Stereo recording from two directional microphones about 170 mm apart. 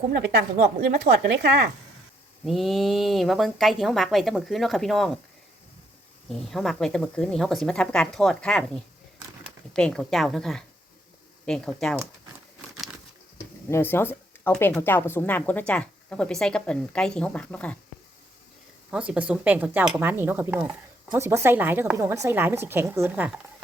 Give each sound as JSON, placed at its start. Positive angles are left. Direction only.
{"t": 1.1, "sound": "speech", "side_deg": -65}
{"t": 2.4, "sound": "speech", "side_deg": 0}
{"t": 6.2, "sound": "speech", "side_deg": 0}
{"t": 13.7, "sound": "a woman's voice", "side_deg": 15}
{"t": 18.9, "sound": "a woman's voice", "side_deg": -5}